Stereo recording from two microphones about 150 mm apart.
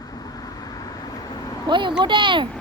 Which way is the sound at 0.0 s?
25° left (ahead or behind).